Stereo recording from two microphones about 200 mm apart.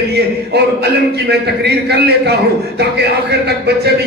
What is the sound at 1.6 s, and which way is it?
A man's voice, 55° right (ahead or behind).